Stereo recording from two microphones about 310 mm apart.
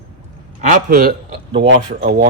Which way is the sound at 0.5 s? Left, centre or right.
Right.